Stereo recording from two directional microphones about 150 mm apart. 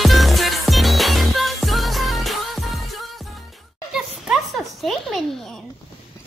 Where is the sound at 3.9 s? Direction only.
5° right (ahead or behind).